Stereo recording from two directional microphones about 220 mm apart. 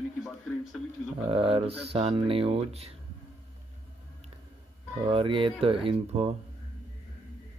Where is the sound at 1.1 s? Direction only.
25° right (ahead or behind).